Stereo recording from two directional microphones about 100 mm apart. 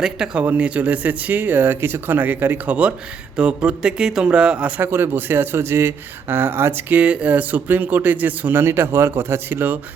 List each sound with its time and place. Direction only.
0.0 s speech: 5° right (ahead or behind)
4.8 s speech: 20° right (ahead or behind)